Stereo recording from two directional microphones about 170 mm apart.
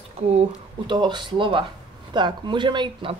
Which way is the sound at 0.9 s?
25° right (ahead or behind).